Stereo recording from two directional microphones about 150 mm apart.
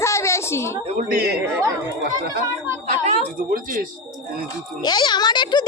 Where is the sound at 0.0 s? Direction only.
20° left (ahead or behind).